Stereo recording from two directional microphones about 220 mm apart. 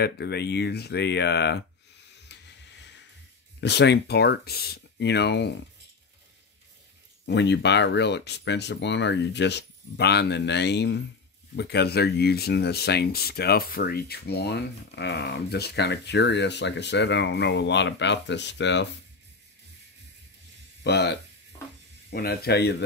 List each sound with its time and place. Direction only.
0.0 s a sound: 50° left (ahead or behind)
3.6 s speech: 50° left (ahead or behind)
7.2 s speech: 50° left (ahead or behind)
20.8 s speech: 50° left (ahead or behind)